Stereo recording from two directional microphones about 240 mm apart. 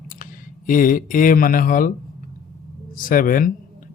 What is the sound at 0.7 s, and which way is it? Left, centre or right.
Speech, left.